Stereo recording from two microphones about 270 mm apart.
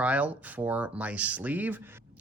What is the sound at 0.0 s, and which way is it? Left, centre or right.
Speech, centre.